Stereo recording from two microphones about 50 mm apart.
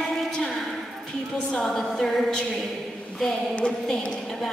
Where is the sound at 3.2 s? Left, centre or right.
Centre.